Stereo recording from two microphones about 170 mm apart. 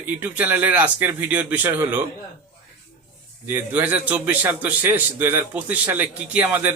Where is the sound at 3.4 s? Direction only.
10° right (ahead or behind).